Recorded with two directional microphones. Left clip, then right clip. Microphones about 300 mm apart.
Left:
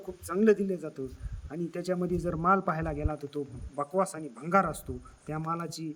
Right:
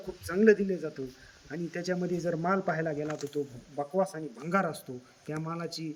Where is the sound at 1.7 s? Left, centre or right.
Left.